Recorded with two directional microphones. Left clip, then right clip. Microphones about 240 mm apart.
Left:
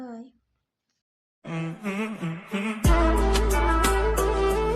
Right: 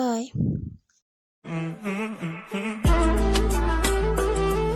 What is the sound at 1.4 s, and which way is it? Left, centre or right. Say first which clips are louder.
Music: right 1 dB; centre.